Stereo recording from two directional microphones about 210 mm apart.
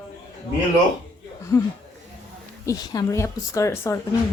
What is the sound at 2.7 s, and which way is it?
A woman's voice, 15° left (ahead or behind).